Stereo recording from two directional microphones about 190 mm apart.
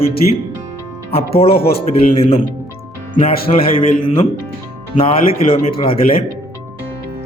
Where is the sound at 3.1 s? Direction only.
45° left (ahead or behind).